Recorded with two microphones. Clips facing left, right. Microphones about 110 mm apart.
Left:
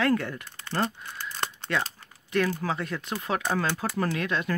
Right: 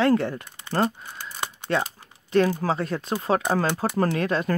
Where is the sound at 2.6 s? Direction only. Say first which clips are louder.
Right 5 dB; 35° right (ahead or behind).